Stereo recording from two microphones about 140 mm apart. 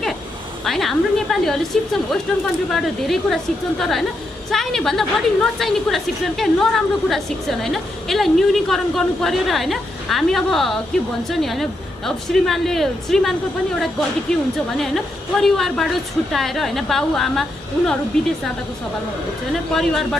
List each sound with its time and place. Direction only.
0.7 s a woman's voice: centre (ahead or behind)
4.5 s a woman's voice: centre (ahead or behind)
19.7 s a woman's voice: centre (ahead or behind)